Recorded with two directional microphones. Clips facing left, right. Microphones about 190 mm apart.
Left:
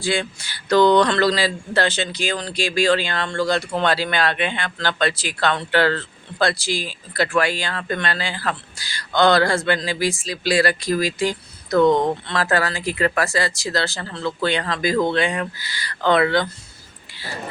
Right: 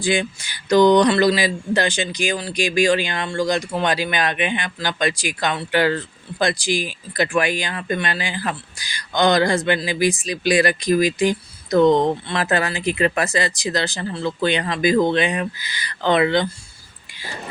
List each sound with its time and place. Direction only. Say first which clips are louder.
0.0 s speech: right 2 dB; 15° right (ahead or behind)